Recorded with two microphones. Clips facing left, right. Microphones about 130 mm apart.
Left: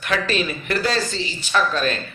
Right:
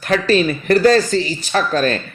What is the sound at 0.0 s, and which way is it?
Speech, 35° right (ahead or behind).